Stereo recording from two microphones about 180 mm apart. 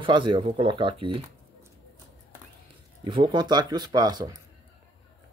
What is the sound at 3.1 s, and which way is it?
Speech, 25° right (ahead or behind).